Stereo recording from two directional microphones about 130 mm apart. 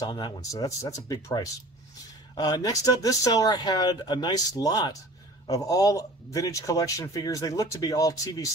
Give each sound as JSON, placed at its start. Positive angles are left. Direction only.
{"t": 0.0, "sound": "a man's voice", "side_deg": 30}